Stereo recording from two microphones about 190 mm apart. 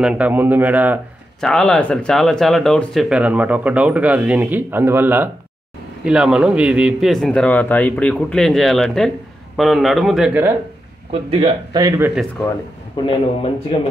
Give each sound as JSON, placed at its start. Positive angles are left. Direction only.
{"t": 0.0, "sound": "speech", "side_deg": -5}
{"t": 1.4, "sound": "a man's voice", "side_deg": 5}
{"t": 11.1, "sound": "speech", "side_deg": -30}
{"t": 12.9, "sound": "a man's voice", "side_deg": 25}